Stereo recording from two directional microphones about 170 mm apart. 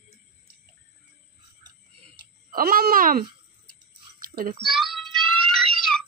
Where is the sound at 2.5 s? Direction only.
60° right (ahead or behind).